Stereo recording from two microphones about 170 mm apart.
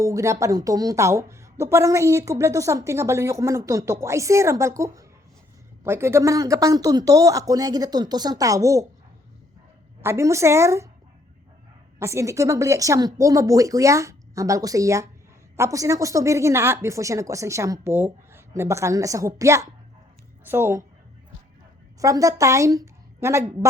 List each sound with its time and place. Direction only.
0.0 s speech: 20° right (ahead or behind)
10.0 s speech: 15° right (ahead or behind)
11.9 s speech: 15° right (ahead or behind)
22.0 s a woman's voice: 20° right (ahead or behind)